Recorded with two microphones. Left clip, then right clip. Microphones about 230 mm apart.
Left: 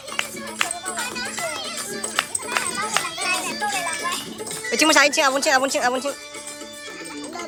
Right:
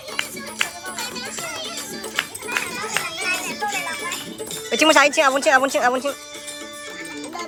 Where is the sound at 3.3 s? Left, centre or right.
Left.